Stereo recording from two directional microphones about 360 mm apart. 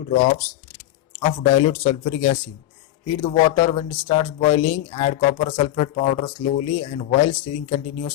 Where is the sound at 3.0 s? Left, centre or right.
Centre.